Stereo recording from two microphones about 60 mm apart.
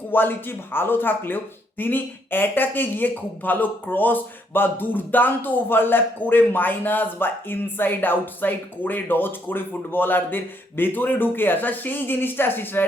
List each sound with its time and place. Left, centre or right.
0.1 s speech: left